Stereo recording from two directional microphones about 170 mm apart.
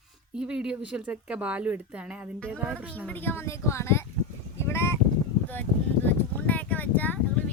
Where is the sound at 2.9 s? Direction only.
10° left (ahead or behind).